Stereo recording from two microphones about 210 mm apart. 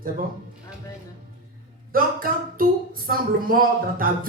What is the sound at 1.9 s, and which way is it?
Speech, 40° right (ahead or behind).